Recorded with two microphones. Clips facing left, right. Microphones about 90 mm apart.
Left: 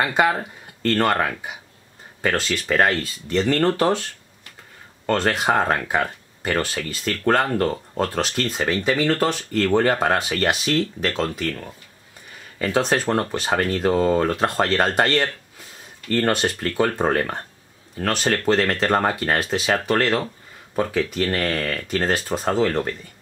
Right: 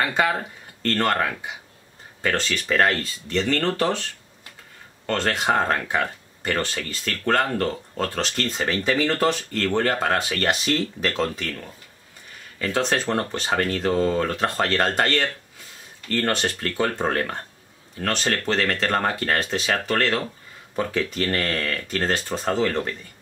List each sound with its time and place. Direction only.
0.0 s speech: 10° left (ahead or behind)
2.2 s speech: 5° left (ahead or behind)
5.0 s speech: 10° left (ahead or behind)
9.7 s speech: 15° left (ahead or behind)
10.6 s speech: centre (ahead or behind)
12.5 s speech: 15° left (ahead or behind)
12.8 s speech: 5° left (ahead or behind)
18.0 s speech: 5° left (ahead or behind)